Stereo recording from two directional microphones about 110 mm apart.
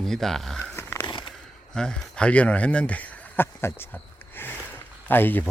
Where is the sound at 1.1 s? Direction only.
45° left (ahead or behind).